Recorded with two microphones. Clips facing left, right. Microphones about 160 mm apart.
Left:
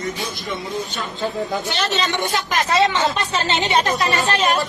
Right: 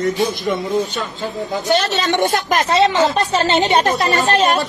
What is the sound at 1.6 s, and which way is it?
A woman's voice, 40° right (ahead or behind).